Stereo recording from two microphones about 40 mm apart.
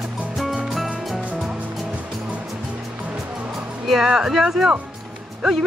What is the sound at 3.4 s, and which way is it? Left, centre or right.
Music, right.